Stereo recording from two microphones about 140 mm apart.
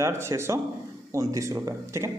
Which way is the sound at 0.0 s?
20° right (ahead or behind).